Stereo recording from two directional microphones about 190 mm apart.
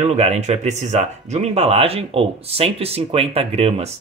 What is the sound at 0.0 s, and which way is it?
Speech, 35° right (ahead or behind).